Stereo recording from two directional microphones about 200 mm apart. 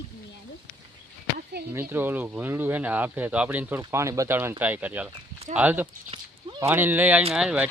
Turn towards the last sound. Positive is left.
turn(degrees=-5)  # may be behind; listen again after turning